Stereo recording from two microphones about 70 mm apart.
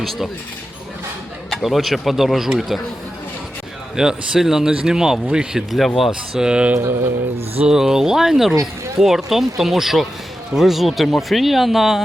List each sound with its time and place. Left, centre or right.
0.0 s speech: centre
1.5 s speech: centre
3.9 s speech: centre
5.7 s speech: centre
6.7 s mantra: right
7.7 s speech: centre